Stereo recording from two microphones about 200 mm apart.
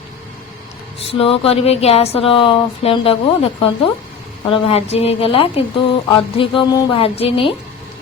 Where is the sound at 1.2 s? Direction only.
30° left (ahead or behind).